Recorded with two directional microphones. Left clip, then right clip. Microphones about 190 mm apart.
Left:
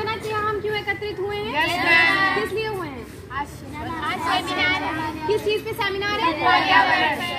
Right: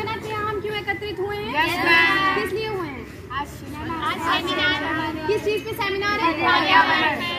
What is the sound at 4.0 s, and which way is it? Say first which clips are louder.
Children playing: even; 15° left (ahead or behind).